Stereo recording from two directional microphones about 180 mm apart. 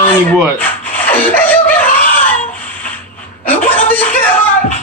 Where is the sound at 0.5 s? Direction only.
10° left (ahead or behind).